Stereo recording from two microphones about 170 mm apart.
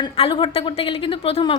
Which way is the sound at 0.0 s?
30° left (ahead or behind).